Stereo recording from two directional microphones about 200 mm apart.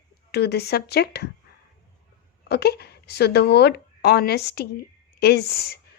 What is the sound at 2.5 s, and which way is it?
Speech, 55° left (ahead or behind).